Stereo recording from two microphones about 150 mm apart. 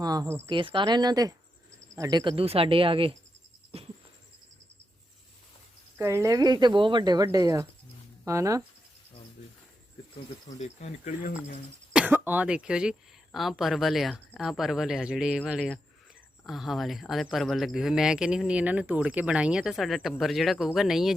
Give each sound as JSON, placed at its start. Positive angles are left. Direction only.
{"t": 0.0, "sound": "speech", "side_deg": -25}
{"t": 0.4, "sound": "speech", "side_deg": -35}
{"t": 2.3, "sound": "speech", "side_deg": -40}
{"t": 3.7, "sound": "a sound", "side_deg": -40}
{"t": 6.0, "sound": "speech", "side_deg": -15}
{"t": 10.4, "sound": "speech", "side_deg": 50}
{"t": 11.9, "sound": "speech", "side_deg": -10}